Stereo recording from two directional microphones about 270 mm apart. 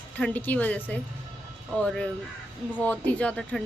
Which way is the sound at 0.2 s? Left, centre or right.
Centre.